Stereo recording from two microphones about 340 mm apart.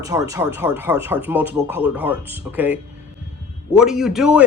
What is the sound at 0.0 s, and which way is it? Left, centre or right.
Speech, centre.